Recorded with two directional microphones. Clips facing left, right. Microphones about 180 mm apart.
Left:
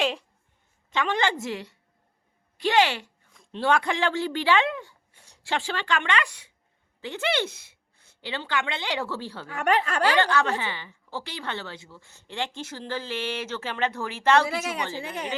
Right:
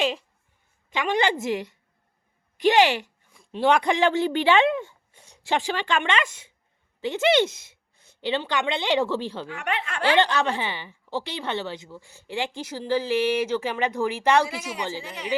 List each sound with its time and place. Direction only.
0.0 s a sound: centre (ahead or behind)
0.9 s a woman's voice: 15° right (ahead or behind)
2.6 s a sound: 15° right (ahead or behind)
3.7 s speech: 20° right (ahead or behind)
9.5 s speech: 40° left (ahead or behind)
10.2 s a woman's voice: 20° right (ahead or behind)
14.9 s speech: 55° left (ahead or behind)